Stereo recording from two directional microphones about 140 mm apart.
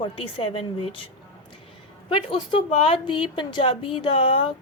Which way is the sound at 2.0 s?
40° left (ahead or behind).